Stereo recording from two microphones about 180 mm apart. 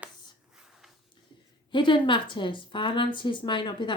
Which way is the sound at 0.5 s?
Centre (ahead or behind).